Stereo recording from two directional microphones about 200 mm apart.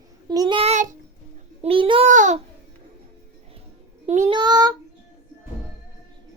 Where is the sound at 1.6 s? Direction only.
25° right (ahead or behind).